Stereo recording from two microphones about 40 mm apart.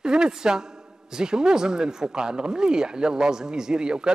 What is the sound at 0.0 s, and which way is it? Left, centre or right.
Speech, centre.